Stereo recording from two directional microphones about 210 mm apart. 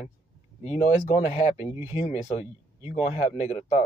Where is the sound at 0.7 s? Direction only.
35° left (ahead or behind).